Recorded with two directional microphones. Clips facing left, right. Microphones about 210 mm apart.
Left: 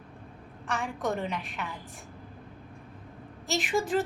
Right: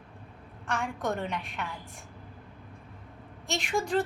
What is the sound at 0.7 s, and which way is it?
Speech, centre (ahead or behind).